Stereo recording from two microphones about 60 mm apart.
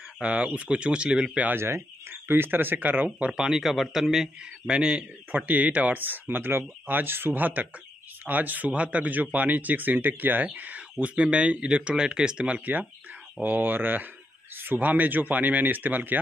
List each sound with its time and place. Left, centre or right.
0.2 s speech: centre
1.5 s speech: right
3.3 s speech: centre
4.4 s speech: centre; by 16.2 s right